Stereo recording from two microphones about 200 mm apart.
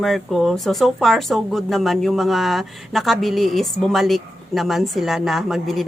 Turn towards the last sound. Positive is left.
turn(degrees=0)  # may be behind; listen again after turning